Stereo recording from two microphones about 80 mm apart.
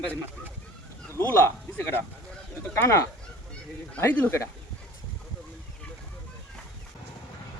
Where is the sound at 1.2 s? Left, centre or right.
Left.